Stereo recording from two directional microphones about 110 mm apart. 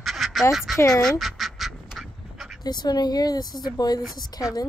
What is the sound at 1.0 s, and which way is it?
Duck, centre (ahead or behind).